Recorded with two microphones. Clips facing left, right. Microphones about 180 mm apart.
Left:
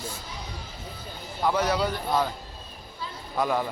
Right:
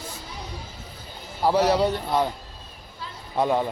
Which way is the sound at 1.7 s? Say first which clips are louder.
Right 4 dB; 25° right (ahead or behind).